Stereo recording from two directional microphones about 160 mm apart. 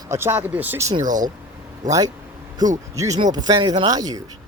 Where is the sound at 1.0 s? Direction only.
55° right (ahead or behind).